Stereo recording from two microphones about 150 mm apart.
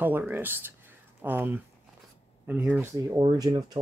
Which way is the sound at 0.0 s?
15° right (ahead or behind).